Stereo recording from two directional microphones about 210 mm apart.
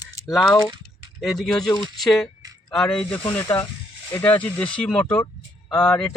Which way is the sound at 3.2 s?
20° left (ahead or behind).